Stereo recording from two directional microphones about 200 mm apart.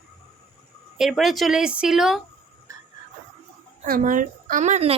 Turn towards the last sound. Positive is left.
turn(degrees=-30)  # may be behind; listen again after turning